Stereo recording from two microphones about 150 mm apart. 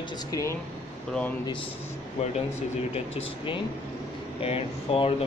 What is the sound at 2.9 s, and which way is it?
Speech, 40° left (ahead or behind).